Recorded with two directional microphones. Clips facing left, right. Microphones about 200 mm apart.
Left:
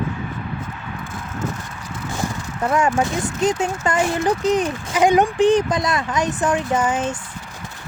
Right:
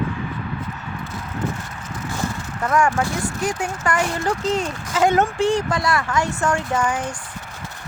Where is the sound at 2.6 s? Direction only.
20° left (ahead or behind).